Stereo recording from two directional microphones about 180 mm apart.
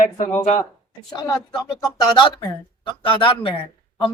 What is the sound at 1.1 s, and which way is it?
Speech, 20° left (ahead or behind).